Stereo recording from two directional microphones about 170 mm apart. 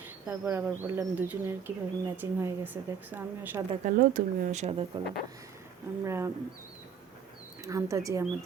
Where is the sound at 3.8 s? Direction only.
50° right (ahead or behind).